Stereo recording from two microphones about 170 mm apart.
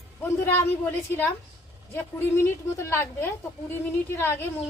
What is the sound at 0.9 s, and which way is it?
Speech, 10° left (ahead or behind).